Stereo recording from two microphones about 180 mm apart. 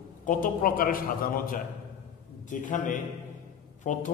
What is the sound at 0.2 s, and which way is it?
A man's voice, 50° left (ahead or behind).